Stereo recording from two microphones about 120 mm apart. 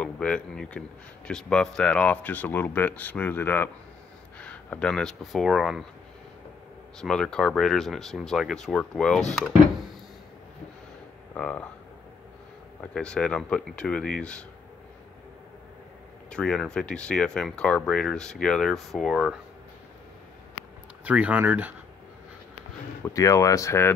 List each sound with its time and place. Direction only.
0.0 s a man's voice: 10° left (ahead or behind)
7.0 s speech: 5° left (ahead or behind)
11.3 s a man's voice: 10° left (ahead or behind)
12.9 s a man's voice: 5° left (ahead or behind)
16.3 s speech: 5° left (ahead or behind)
21.0 s speech: 10° right (ahead or behind)
23.0 s speech: 25° left (ahead or behind)